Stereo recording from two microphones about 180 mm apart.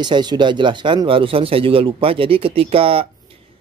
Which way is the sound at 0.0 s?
25° right (ahead or behind).